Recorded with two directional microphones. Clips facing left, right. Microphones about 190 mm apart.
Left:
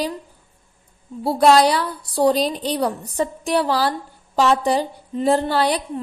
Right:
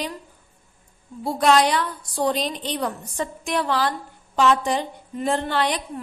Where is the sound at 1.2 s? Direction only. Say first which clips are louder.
Left 4 dB; 35° left (ahead or behind).